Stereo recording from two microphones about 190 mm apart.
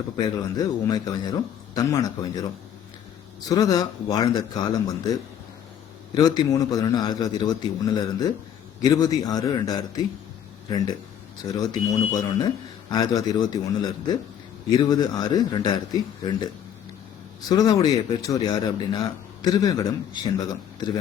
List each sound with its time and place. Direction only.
0.2 s speech: 20° left (ahead or behind)
3.5 s speech: 20° left (ahead or behind)
6.1 s speech: 20° left (ahead or behind)
17.5 s speech: 20° left (ahead or behind)